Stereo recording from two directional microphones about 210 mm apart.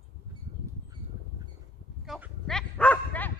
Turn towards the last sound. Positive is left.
turn(degrees=5)  # may be behind; listen again after turning